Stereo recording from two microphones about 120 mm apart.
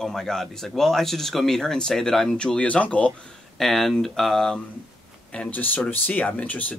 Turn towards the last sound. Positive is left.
turn(degrees=10)  # may be behind; listen again after turning